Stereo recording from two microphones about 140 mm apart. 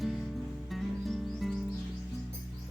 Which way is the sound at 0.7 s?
Centre (ahead or behind).